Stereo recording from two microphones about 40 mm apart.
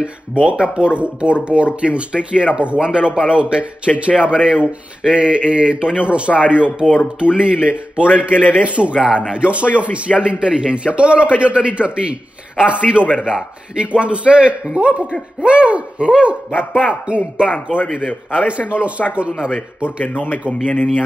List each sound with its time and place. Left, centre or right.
0.0 s speech: right
18.0 s a man's voice: left
18.7 s speech: right
19.3 s a man's voice: centre
20.6 s speech: left